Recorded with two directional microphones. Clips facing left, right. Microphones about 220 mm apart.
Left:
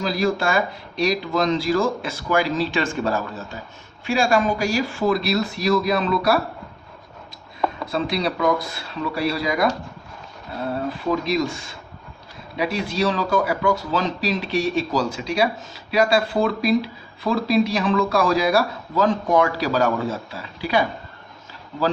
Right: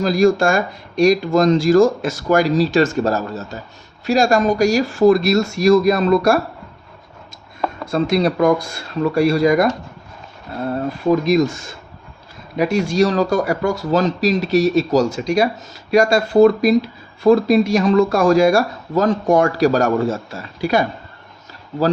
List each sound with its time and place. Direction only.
0.0 s speech: 45° right (ahead or behind)
7.9 s speech: 45° right (ahead or behind)
10.8 s speech: 45° right (ahead or behind)